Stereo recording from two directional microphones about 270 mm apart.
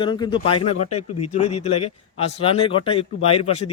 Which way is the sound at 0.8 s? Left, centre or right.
Left.